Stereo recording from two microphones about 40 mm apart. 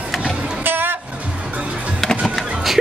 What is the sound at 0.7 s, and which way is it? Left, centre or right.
Vehicle, right.